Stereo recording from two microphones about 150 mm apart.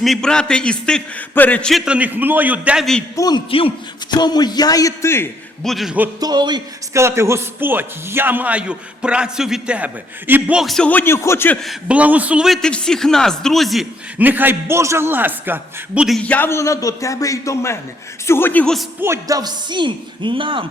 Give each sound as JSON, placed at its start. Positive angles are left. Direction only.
{"t": 0.0, "sound": "a man's voice", "side_deg": 5}
{"t": 3.2, "sound": "speech", "side_deg": 30}
{"t": 5.6, "sound": "a man's voice", "side_deg": 0}
{"t": 6.1, "sound": "speech", "side_deg": -25}
{"t": 7.0, "sound": "a man's voice", "side_deg": -20}
{"t": 11.6, "sound": "a man's voice", "side_deg": -5}
{"t": 14.2, "sound": "a man's voice", "side_deg": -10}
{"t": 16.0, "sound": "a man's voice", "side_deg": 5}
{"t": 19.0, "sound": "speech", "side_deg": -20}